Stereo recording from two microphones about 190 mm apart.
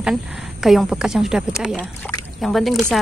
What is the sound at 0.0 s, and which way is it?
A woman's voice, 5° right (ahead or behind).